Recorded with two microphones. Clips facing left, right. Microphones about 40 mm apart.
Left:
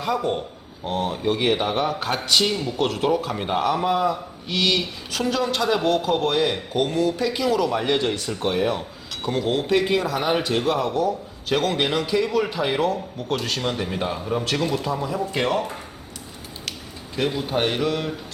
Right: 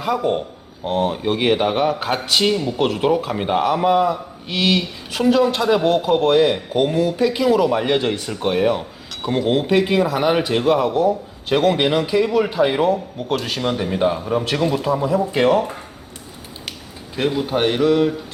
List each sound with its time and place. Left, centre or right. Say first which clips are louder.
0.0 s speech: right 4 dB; centre
17.2 s speech: right 4 dB; centre